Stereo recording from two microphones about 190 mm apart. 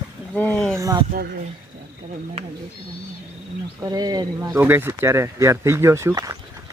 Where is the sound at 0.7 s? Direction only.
20° right (ahead or behind).